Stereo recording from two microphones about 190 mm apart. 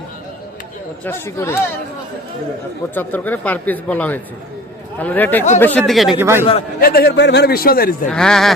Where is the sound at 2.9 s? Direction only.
10° left (ahead or behind).